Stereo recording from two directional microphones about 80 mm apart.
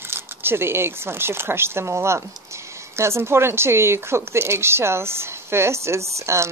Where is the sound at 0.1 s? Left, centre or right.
Right.